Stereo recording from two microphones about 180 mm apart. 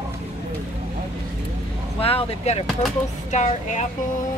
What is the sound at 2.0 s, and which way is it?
Speech, 35° left (ahead or behind).